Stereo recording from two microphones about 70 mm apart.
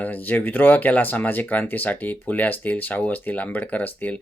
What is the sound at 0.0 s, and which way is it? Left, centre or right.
Speech, left.